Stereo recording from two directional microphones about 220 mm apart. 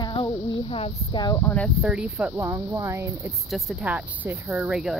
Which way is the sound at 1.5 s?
Centre (ahead or behind).